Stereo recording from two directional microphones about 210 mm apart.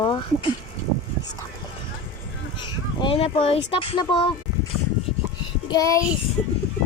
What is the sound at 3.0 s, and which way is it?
Speech, 25° left (ahead or behind).